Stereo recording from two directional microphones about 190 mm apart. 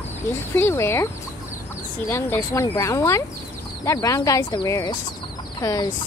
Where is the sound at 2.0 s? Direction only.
10° left (ahead or behind).